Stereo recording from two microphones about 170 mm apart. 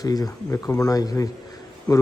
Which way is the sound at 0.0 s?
20° left (ahead or behind).